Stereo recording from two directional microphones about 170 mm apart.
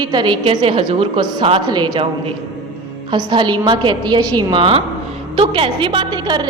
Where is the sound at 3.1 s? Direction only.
30° right (ahead or behind).